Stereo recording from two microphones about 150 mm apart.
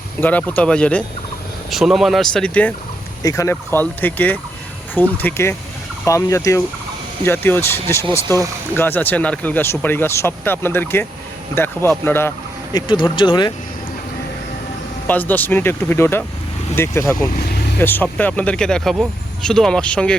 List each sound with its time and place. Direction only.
0.2 s speech: 10° left (ahead or behind)
3.2 s speech: 20° left (ahead or behind)
12.7 s speech: 30° left (ahead or behind)
15.0 s speech: 10° left (ahead or behind)
17.3 s vehicle: 90° left
17.7 s speech: 15° left (ahead or behind)